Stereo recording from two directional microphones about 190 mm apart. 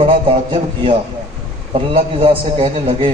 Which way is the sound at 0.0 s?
25° right (ahead or behind).